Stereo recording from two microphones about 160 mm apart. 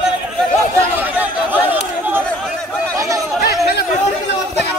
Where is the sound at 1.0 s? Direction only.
10° right (ahead or behind).